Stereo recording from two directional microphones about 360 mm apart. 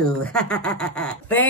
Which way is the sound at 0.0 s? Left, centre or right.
Centre.